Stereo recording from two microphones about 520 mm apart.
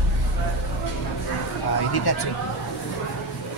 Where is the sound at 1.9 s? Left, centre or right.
Left.